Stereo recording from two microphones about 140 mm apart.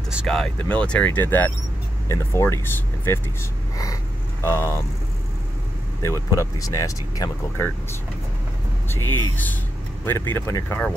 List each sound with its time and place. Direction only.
0.1 s speech: centre (ahead or behind); by 3.2 s 15° left (ahead or behind)
3.7 s a sound: 25° left (ahead or behind)
6.3 s speech: 20° left (ahead or behind)
8.8 s speech: 15° left (ahead or behind)